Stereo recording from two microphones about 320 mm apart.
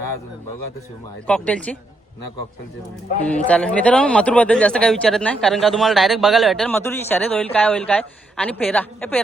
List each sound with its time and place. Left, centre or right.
1.3 s speech: centre
3.2 s speech: centre